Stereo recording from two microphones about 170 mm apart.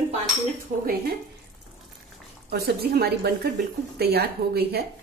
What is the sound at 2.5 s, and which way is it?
A woman's voice, 70° right (ahead or behind).